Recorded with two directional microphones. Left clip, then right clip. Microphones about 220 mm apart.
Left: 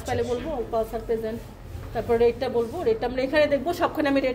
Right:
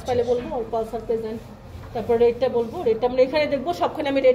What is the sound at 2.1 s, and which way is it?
A woman's voice, 55° left (ahead or behind).